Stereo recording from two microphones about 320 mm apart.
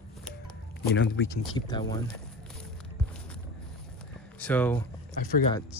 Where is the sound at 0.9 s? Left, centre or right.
Left.